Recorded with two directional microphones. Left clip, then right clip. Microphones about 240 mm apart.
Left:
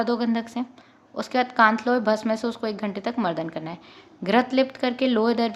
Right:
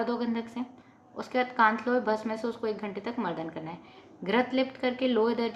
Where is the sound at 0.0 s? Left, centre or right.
Left.